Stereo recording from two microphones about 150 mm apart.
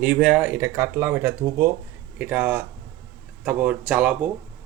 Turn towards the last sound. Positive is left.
turn(degrees=-5)  # may be behind; listen again after turning